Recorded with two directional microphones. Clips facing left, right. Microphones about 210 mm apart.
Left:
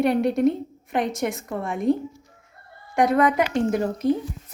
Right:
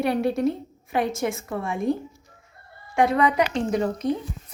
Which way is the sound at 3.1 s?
Centre (ahead or behind).